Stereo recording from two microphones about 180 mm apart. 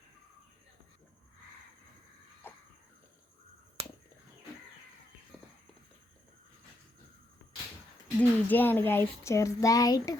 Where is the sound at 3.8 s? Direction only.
35° right (ahead or behind).